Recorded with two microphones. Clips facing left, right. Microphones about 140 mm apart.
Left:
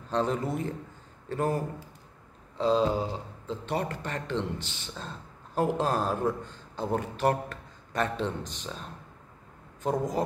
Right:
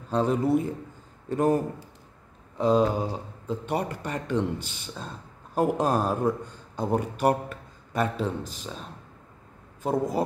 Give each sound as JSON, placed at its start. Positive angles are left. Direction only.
{"t": 0.1, "sound": "speech", "side_deg": -10}
{"t": 9.8, "sound": "speech", "side_deg": -10}